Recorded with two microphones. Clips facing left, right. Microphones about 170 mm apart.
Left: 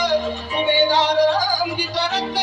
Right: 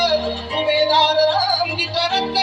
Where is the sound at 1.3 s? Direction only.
30° right (ahead or behind).